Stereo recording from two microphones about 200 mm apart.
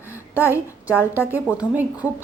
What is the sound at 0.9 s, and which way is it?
A woman's voice, 10° right (ahead or behind).